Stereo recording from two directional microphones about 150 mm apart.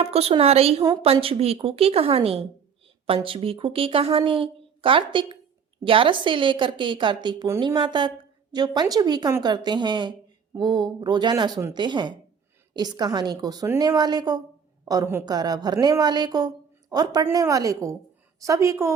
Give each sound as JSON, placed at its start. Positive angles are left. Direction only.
{"t": 0.0, "sound": "a woman's voice", "side_deg": -40}